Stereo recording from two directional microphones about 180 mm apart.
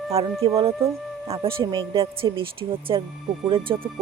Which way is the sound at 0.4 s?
30° right (ahead or behind).